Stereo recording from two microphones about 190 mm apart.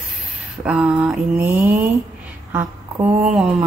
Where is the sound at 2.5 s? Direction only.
10° right (ahead or behind).